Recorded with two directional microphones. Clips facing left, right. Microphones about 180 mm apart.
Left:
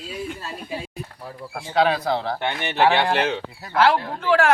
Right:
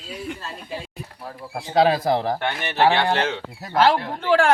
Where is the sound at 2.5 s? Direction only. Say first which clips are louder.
Left 1 dB; 20° left (ahead or behind).